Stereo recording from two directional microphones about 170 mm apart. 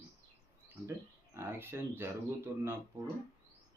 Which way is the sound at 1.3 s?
15° right (ahead or behind).